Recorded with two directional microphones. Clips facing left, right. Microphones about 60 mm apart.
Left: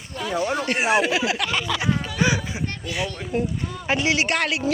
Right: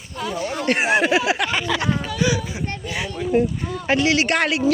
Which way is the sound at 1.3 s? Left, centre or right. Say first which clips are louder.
Right 3 dB; right.